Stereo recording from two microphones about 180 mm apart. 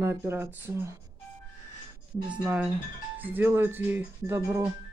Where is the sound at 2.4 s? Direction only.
5° right (ahead or behind).